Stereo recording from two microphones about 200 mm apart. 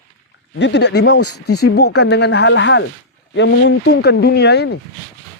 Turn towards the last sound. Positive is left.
turn(degrees=55)  # may be behind; listen again after turning